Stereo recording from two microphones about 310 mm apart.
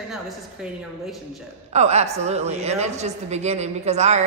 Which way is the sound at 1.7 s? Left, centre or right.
Right.